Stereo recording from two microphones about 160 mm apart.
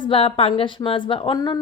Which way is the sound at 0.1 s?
35° left (ahead or behind).